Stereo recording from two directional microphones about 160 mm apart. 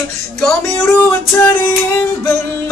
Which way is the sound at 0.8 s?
15° left (ahead or behind).